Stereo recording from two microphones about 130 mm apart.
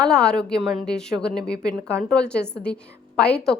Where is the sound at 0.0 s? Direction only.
5° left (ahead or behind).